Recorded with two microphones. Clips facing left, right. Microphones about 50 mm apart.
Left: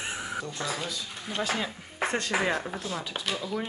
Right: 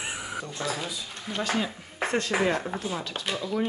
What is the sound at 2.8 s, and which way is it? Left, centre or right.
Speech, centre.